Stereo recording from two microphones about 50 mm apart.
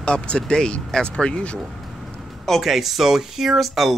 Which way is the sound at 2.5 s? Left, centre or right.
Centre.